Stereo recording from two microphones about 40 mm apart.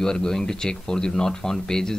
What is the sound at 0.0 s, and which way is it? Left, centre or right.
Speech, centre.